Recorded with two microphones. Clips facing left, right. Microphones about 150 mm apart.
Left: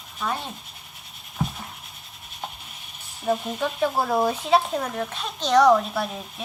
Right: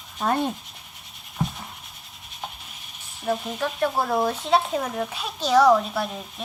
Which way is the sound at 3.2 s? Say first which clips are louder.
Left 1 dB; 5° left (ahead or behind).